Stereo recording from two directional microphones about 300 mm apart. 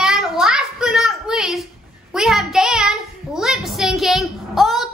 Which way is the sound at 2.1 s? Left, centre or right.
Centre.